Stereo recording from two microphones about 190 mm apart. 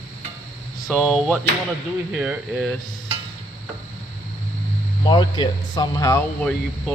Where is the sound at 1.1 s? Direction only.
5° right (ahead or behind).